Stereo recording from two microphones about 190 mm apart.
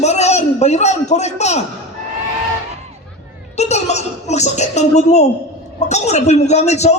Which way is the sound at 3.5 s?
35° left (ahead or behind).